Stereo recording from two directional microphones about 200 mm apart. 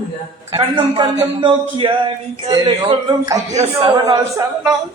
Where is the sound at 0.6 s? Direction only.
25° right (ahead or behind).